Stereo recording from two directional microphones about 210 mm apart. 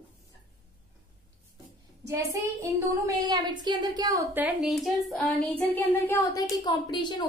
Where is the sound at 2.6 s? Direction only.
15° right (ahead or behind).